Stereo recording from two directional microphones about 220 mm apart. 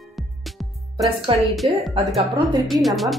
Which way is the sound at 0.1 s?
Centre (ahead or behind).